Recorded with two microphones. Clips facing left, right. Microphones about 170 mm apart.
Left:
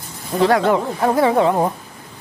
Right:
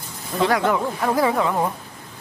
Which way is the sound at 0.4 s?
30° left (ahead or behind).